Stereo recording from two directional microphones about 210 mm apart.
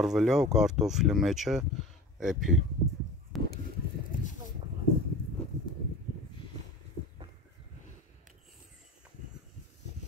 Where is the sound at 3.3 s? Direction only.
Centre (ahead or behind).